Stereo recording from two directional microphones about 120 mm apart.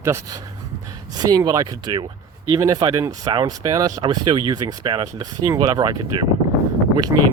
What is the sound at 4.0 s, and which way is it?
Speech, 40° right (ahead or behind).